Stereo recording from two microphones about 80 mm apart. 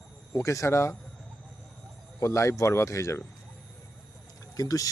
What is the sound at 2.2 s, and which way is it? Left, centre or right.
Speech, left.